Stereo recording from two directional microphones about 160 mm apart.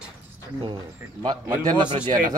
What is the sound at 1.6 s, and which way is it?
Speech, 25° right (ahead or behind).